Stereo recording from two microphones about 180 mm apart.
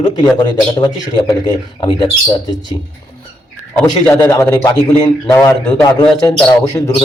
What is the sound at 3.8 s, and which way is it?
A man's voice, 5° left (ahead or behind).